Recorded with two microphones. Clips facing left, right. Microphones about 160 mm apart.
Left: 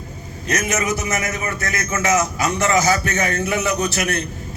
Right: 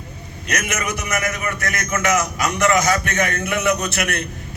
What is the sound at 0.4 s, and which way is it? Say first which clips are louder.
A man's voice: left 3 dB; 30° left (ahead or behind).